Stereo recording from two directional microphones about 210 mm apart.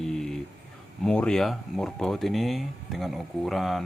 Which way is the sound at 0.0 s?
Centre (ahead or behind).